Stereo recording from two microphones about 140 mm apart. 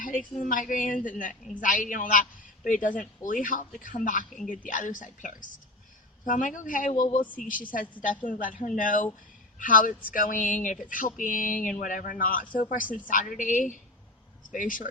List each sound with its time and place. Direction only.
0.0 s a woman's voice: 70° left (ahead or behind)